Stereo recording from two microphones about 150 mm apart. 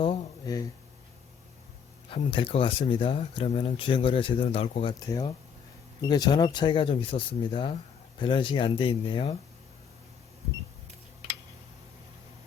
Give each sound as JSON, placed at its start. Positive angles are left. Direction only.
{"t": 0.4, "sound": "speech", "side_deg": 25}
{"t": 2.0, "sound": "speech", "side_deg": 35}